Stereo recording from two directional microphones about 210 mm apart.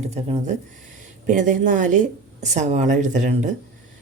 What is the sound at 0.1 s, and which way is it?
Speech, 30° right (ahead or behind).